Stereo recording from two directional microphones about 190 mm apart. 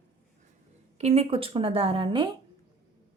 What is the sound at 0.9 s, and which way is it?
Speech, 35° right (ahead or behind).